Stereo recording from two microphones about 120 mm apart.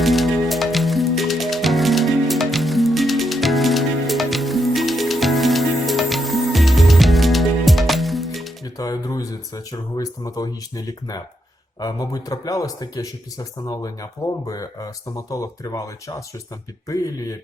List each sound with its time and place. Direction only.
0.0 s music: centre (ahead or behind)
8.6 s speech: 30° left (ahead or behind)